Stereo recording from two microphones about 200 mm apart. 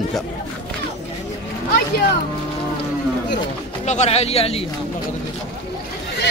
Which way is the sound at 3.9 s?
35° left (ahead or behind).